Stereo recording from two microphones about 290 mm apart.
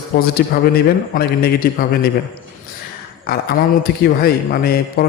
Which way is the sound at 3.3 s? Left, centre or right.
Left.